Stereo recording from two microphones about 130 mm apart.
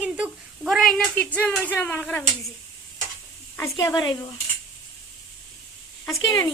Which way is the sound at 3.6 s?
30° left (ahead or behind).